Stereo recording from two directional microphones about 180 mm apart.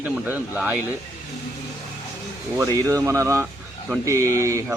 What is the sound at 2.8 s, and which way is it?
Speech, 20° right (ahead or behind).